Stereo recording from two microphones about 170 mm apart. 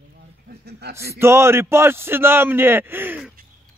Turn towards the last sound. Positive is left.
turn(degrees=-10)  # may be behind; listen again after turning